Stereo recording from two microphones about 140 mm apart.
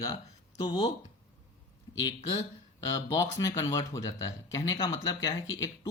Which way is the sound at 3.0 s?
20° left (ahead or behind).